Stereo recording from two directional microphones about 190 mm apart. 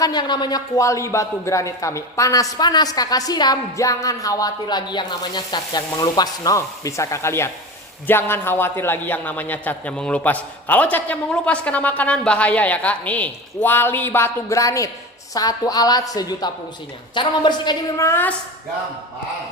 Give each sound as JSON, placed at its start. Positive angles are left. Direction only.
{"t": 0.0, "sound": "a man's voice", "side_deg": 20}